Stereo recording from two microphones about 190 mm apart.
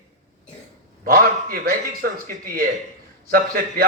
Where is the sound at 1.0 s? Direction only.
50° right (ahead or behind).